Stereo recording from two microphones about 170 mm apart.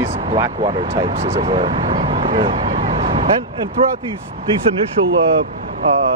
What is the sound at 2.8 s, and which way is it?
Vehicle, 35° right (ahead or behind).